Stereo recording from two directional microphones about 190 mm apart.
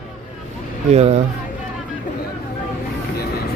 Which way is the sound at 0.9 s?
35° right (ahead or behind).